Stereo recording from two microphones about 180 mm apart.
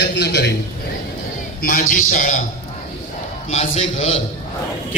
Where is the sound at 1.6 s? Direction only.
50° left (ahead or behind).